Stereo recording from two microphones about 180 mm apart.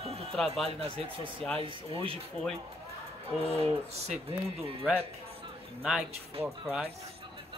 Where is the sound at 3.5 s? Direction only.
35° right (ahead or behind).